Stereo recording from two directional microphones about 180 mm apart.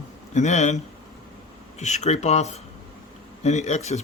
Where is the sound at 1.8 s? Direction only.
40° left (ahead or behind).